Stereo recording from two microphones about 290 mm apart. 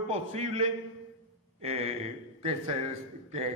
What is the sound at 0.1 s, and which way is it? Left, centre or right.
A man's voice, right.